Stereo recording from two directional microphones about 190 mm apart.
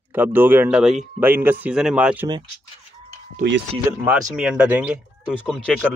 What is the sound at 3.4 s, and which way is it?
Speech, 60° right (ahead or behind).